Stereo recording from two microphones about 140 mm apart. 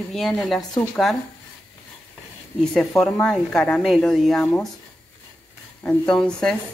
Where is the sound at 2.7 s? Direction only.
5° left (ahead or behind).